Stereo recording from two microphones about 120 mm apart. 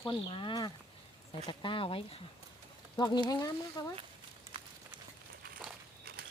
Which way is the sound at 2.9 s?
40° left (ahead or behind).